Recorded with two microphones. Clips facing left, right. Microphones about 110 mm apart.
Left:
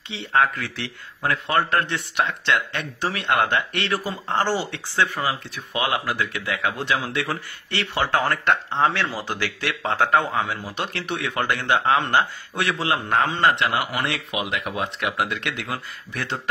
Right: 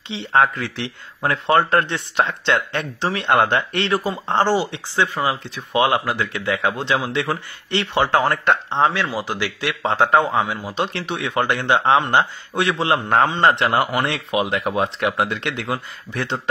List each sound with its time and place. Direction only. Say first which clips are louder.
0.1 s speech: right 3 dB; 25° right (ahead or behind)
3.9 s speech: right 4 dB; 20° right (ahead or behind)